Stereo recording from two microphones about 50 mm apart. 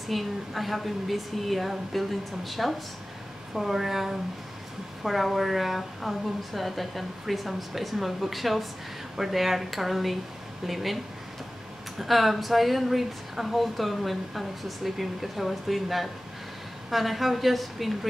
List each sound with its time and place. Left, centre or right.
0.1 s speech: centre
12.0 s speech: centre